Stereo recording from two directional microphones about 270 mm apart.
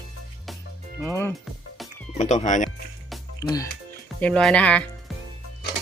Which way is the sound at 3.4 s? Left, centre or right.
Centre.